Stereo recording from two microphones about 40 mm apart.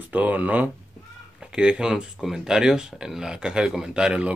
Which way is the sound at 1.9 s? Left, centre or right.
Centre.